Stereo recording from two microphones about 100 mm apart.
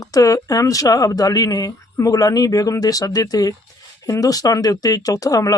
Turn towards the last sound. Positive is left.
turn(degrees=35)  # may be behind; listen again after turning